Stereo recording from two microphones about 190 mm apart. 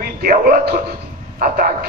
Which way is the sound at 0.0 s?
50° right (ahead or behind).